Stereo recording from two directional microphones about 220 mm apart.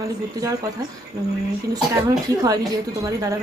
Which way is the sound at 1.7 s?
15° right (ahead or behind).